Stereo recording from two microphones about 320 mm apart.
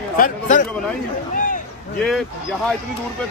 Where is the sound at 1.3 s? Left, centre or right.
Left.